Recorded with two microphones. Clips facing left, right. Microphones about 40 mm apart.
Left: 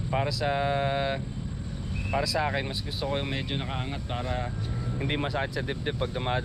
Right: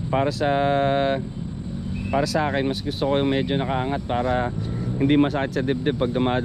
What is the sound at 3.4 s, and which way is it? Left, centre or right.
Speech, centre.